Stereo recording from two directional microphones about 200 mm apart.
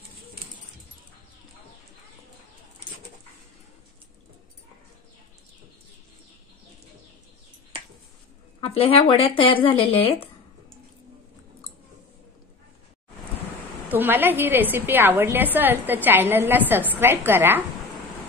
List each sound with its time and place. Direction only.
8.5 s speech: 30° left (ahead or behind)
13.8 s a woman's voice: 10° right (ahead or behind)